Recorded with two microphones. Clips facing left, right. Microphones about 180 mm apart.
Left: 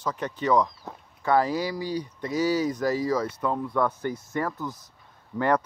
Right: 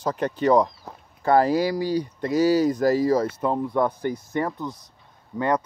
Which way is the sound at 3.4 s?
20° right (ahead or behind).